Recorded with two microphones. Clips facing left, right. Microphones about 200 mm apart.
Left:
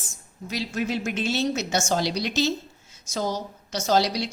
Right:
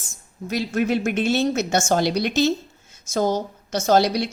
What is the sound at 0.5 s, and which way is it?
A woman's voice, 55° right (ahead or behind).